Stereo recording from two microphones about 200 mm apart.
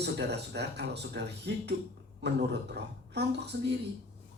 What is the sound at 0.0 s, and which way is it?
A man's voice, 55° right (ahead or behind).